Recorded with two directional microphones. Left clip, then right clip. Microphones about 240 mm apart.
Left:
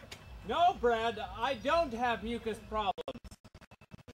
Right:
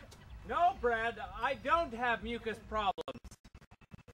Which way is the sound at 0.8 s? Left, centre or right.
Centre.